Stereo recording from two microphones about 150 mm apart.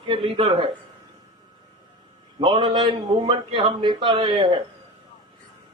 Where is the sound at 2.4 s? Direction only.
30° right (ahead or behind).